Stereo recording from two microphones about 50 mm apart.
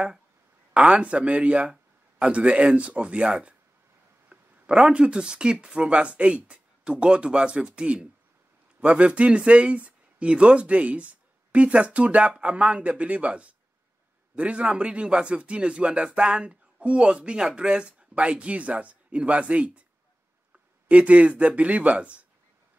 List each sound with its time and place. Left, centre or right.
0.7 s speech: right
20.9 s speech: right